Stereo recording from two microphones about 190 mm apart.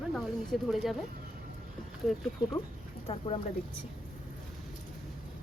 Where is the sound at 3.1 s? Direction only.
30° left (ahead or behind).